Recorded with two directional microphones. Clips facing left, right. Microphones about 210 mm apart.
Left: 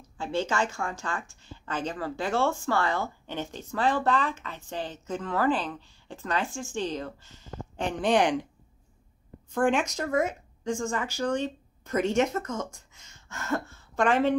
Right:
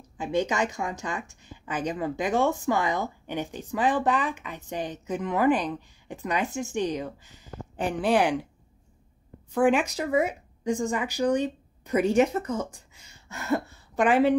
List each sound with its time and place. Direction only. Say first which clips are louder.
0.0 s a woman's voice: right 3 dB; 15° right (ahead or behind)
9.5 s a woman's voice: right 3 dB; 5° right (ahead or behind)
12.4 s speech: right 3 dB; 35° right (ahead or behind)
12.9 s a sound: right 2 dB; 10° right (ahead or behind)